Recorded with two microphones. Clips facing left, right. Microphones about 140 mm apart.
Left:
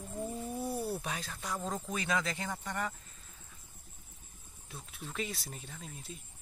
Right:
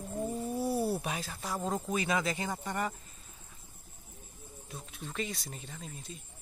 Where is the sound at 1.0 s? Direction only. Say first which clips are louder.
Right 2 dB; 10° right (ahead or behind).